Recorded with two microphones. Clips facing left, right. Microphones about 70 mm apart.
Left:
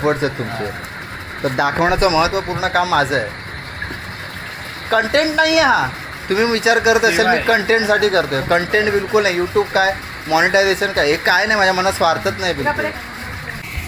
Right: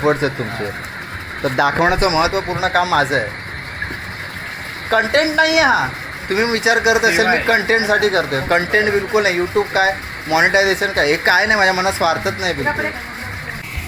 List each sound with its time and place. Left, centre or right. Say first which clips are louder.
0.0 s speech: right 1 dB; right
1.9 s speech: left 1 dB; right
4.9 s speech: even; right